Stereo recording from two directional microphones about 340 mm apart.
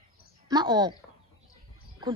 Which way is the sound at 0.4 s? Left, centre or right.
Centre.